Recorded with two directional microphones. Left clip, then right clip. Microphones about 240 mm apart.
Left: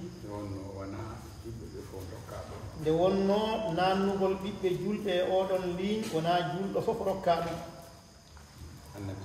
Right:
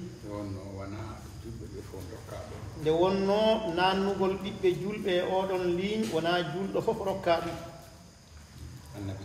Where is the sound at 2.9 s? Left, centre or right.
Centre.